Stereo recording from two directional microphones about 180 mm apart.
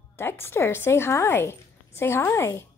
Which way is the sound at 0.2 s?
15° left (ahead or behind).